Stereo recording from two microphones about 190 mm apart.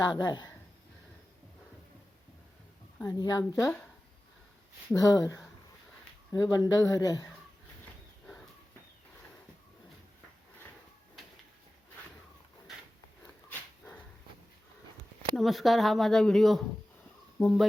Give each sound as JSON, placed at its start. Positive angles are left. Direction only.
{"t": 0.0, "sound": "speech", "side_deg": 20}
{"t": 3.1, "sound": "speech", "side_deg": 20}
{"t": 3.6, "sound": "speech", "side_deg": 5}
{"t": 4.9, "sound": "speech", "side_deg": 20}
{"t": 13.5, "sound": "dog", "side_deg": 5}
{"t": 15.4, "sound": "speech", "side_deg": 0}